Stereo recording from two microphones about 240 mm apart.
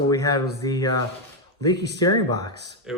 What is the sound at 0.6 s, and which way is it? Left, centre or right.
Speech, centre.